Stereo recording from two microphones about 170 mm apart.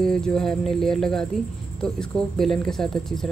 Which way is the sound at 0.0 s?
5° left (ahead or behind).